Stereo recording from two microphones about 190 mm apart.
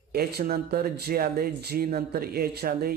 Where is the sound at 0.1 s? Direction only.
55° right (ahead or behind).